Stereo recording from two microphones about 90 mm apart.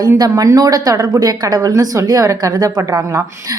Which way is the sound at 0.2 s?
45° right (ahead or behind).